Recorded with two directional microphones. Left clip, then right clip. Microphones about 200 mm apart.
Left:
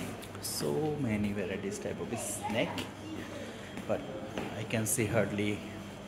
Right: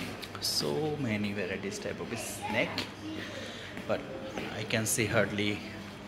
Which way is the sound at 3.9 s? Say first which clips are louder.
Right 1 dB; 10° left (ahead or behind).